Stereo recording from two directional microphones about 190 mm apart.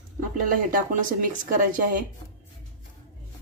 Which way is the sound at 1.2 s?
45° right (ahead or behind).